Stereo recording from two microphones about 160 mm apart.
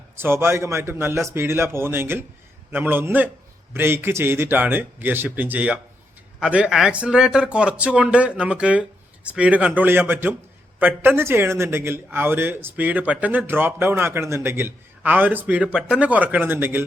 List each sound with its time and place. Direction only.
0.2 s a man's voice: 15° right (ahead or behind)